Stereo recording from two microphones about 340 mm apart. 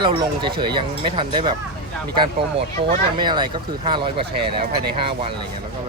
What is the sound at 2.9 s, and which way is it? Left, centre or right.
Speech, centre.